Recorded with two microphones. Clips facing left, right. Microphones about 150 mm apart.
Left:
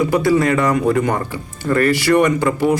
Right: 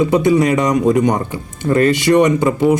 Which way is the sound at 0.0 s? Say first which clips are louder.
Right 2 dB; 20° right (ahead or behind).